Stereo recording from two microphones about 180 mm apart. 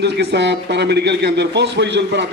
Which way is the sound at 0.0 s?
65° right (ahead or behind).